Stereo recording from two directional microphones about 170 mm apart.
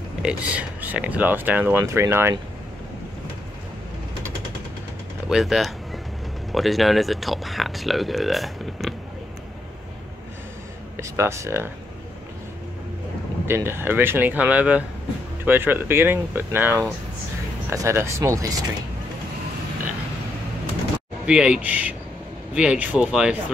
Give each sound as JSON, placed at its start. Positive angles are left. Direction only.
{"t": 0.2, "sound": "speech", "side_deg": -5}
{"t": 5.3, "sound": "speech", "side_deg": 0}
{"t": 11.0, "sound": "speech", "side_deg": -15}
{"t": 13.5, "sound": "speech", "side_deg": -15}
{"t": 21.3, "sound": "speech", "side_deg": -5}